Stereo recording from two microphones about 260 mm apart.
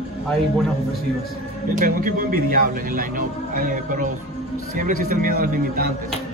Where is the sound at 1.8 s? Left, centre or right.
Right.